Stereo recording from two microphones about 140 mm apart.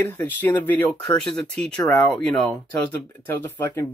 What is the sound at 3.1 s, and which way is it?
Speech, 15° left (ahead or behind).